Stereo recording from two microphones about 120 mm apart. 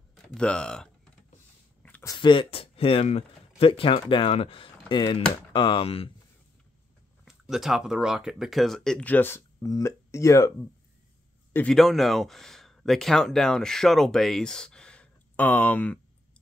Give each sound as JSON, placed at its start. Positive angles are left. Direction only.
{"t": 0.3, "sound": "speech", "side_deg": 10}
{"t": 1.8, "sound": "a sound", "side_deg": 15}
{"t": 2.1, "sound": "speech", "side_deg": 45}
{"t": 7.2, "sound": "speech", "side_deg": -5}
{"t": 11.5, "sound": "speech", "side_deg": 5}